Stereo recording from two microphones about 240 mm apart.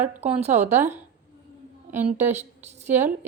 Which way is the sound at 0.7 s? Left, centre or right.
Centre.